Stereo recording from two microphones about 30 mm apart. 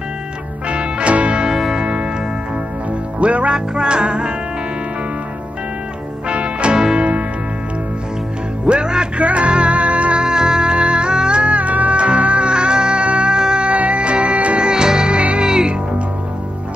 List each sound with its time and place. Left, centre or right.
0.7 s music: right
3.2 s music: right
3.5 s music: right
6.2 s music: right
8.6 s music: right
9.2 s music: right
10.2 s music: right
12.0 s music: right
13.4 s music: right
13.7 s music: right
14.6 s music: right